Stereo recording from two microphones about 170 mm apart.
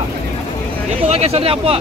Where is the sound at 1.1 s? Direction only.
35° right (ahead or behind).